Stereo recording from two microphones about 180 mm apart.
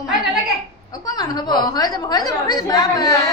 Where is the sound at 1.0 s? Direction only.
20° left (ahead or behind).